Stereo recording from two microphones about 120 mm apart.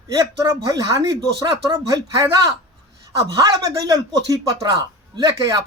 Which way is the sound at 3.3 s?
30° right (ahead or behind).